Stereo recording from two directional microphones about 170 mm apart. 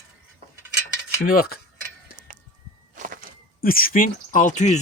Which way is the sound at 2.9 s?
50° right (ahead or behind).